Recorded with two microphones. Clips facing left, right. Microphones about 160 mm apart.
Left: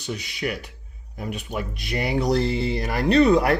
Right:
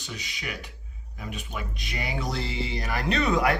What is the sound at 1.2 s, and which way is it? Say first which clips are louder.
Speech: left 6 dB; 40° left (ahead or behind).